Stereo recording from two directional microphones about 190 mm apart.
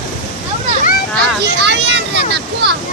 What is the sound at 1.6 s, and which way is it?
Speech, 65° right (ahead or behind).